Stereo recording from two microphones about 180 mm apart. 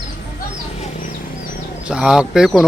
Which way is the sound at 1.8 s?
5° right (ahead or behind).